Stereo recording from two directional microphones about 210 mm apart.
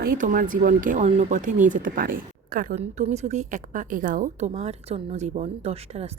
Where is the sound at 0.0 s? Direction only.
40° right (ahead or behind).